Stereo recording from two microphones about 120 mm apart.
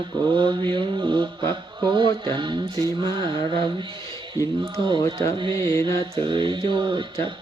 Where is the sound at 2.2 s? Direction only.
40° right (ahead or behind).